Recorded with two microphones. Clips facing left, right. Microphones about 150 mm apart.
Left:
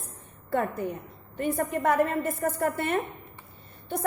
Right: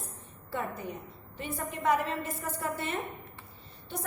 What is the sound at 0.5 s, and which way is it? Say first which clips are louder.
A woman's voice: left 8 dB; 55° left (ahead or behind).